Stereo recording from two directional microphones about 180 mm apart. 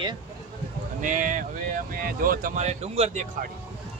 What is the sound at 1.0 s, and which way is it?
Speech, 45° right (ahead or behind).